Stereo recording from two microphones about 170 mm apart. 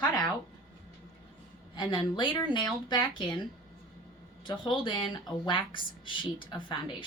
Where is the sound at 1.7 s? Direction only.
25° left (ahead or behind).